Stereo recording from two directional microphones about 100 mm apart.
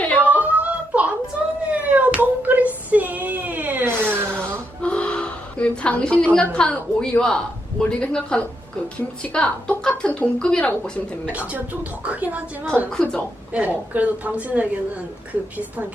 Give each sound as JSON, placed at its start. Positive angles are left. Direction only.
{"t": 0.2, "sound": "a sound", "side_deg": -15}
{"t": 4.8, "sound": "a woman's voice", "side_deg": 10}
{"t": 11.3, "sound": "speech", "side_deg": -15}
{"t": 12.9, "sound": "a woman's voice", "side_deg": 5}
{"t": 13.5, "sound": "speech", "side_deg": -15}